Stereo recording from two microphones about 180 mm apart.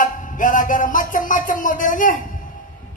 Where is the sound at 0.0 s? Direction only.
45° left (ahead or behind).